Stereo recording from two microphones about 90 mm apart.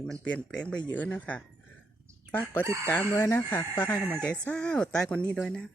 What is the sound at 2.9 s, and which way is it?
Speech, 25° left (ahead or behind).